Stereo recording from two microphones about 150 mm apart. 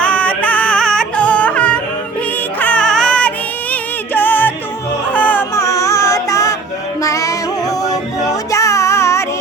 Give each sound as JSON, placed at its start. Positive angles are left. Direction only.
{"t": 0.0, "sound": "music", "side_deg": 10}